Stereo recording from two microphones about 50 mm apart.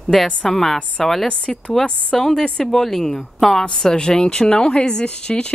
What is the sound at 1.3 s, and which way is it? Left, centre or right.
Speech, left.